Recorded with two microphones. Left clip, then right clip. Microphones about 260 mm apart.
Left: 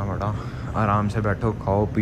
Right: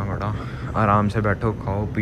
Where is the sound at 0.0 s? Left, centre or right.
Centre.